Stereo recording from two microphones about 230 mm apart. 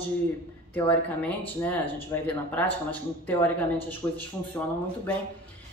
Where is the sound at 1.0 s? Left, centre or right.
Centre.